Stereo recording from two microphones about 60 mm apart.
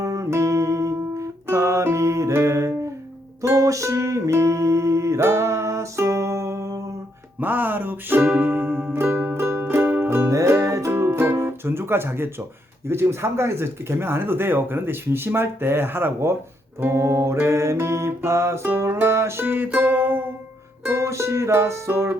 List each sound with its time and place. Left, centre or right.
0.0 s music: right
7.3 s music: right
10.2 s music: right
10.9 s music: right
12.9 s speech: right
16.8 s music: right
20.8 s music: right